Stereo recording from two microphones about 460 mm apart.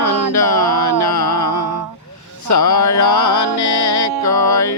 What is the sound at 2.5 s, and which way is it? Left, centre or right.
Music, left.